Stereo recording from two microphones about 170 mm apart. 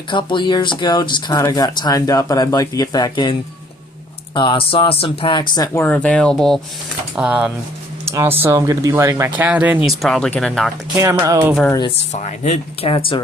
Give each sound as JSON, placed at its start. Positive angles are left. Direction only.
{"t": 0.1, "sound": "speech", "side_deg": 30}
{"t": 4.4, "sound": "speech", "side_deg": 30}
{"t": 10.9, "sound": "speech", "side_deg": -20}
{"t": 12.2, "sound": "speech", "side_deg": 40}